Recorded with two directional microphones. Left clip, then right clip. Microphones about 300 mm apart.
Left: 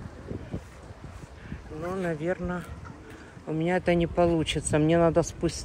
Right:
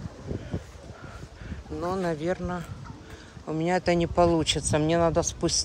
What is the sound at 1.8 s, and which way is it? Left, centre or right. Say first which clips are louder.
Speech: right 2 dB; centre.